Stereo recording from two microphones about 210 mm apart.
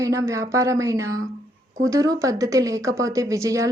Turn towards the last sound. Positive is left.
turn(degrees=-15)  # may be behind; listen again after turning